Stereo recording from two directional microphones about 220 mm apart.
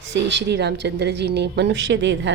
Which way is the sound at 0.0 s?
50° right (ahead or behind).